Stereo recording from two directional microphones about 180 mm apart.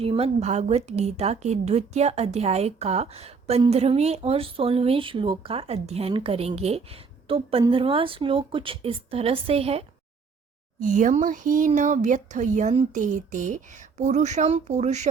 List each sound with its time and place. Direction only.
0.0 s speech: 35° right (ahead or behind)
10.8 s speech: 45° right (ahead or behind)